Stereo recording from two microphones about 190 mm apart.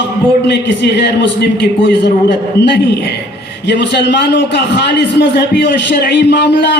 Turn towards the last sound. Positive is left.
turn(degrees=65)  # may be behind; listen again after turning